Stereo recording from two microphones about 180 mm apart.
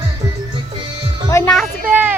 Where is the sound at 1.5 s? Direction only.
Centre (ahead or behind).